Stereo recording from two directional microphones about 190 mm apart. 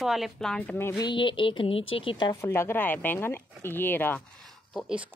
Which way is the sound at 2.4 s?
15° left (ahead or behind).